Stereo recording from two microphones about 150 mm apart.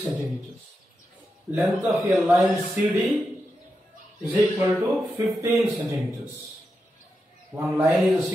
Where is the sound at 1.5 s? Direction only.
5° right (ahead or behind).